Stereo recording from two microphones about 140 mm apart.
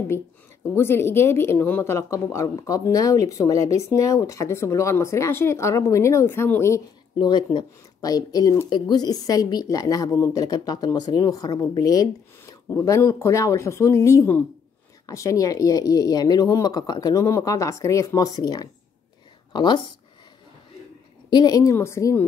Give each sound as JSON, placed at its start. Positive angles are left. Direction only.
{"t": 0.7, "sound": "speech", "side_deg": 15}
{"t": 7.2, "sound": "speech", "side_deg": 30}
{"t": 21.3, "sound": "speech", "side_deg": 30}